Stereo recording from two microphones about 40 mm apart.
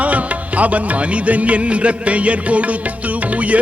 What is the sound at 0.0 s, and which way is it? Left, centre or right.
Music, right.